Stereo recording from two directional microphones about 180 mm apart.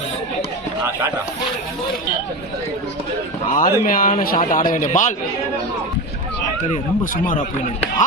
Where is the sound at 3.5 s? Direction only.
50° left (ahead or behind).